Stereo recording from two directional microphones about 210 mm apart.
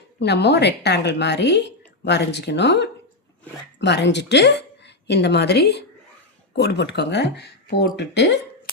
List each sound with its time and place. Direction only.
0.2 s a woman's voice: 55° left (ahead or behind)